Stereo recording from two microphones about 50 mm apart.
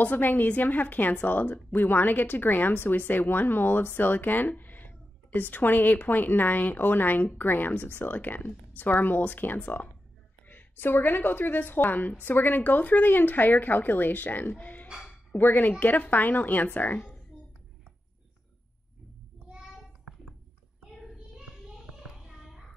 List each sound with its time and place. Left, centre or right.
0.0 s a woman's voice: left
21.4 s child singing: centre
22.1 s a sound: centre